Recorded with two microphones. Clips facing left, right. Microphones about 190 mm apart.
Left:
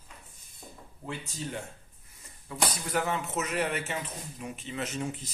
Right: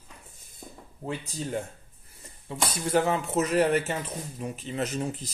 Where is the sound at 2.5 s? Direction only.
30° right (ahead or behind).